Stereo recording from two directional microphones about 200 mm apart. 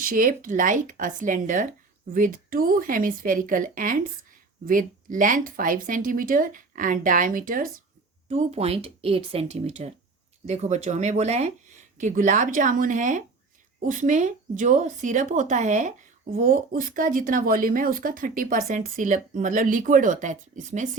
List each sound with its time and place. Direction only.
0.0 s speech: 45° right (ahead or behind)